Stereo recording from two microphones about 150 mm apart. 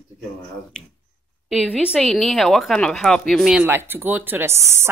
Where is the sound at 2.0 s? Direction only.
5° left (ahead or behind).